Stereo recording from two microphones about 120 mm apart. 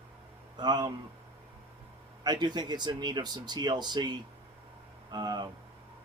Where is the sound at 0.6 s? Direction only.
35° right (ahead or behind).